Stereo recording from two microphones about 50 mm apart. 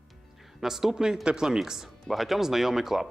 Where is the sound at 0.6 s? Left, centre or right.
Centre.